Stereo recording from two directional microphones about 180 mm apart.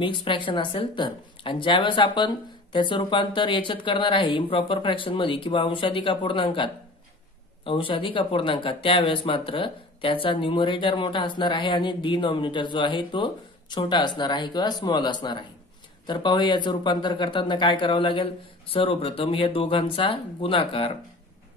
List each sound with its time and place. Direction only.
0.0 s speech: 25° left (ahead or behind)